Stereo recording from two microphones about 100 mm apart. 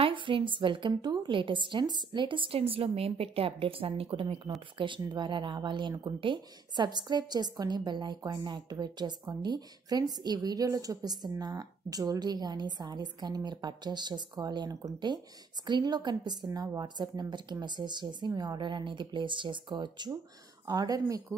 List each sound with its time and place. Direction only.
0.0 s a woman's voice: 55° right (ahead or behind)
4.7 s a woman's voice: 55° right (ahead or behind)
16.4 s a woman's voice: 35° right (ahead or behind)